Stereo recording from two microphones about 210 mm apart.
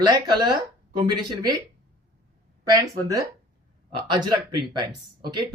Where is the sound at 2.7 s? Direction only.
15° right (ahead or behind).